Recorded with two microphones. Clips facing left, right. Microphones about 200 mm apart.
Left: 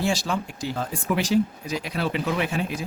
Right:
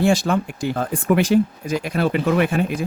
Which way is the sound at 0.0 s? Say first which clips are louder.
Right 7 dB; 55° right (ahead or behind).